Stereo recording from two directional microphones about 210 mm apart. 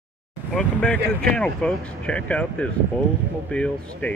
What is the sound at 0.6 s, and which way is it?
Speech, 5° left (ahead or behind).